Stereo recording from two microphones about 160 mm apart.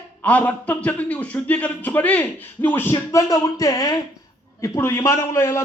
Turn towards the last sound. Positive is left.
turn(degrees=15)  # may be behind; listen again after turning